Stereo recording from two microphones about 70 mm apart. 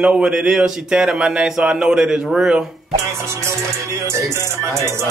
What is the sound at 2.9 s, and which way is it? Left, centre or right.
Music, right.